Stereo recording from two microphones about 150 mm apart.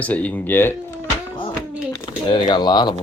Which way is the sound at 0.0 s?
10° left (ahead or behind).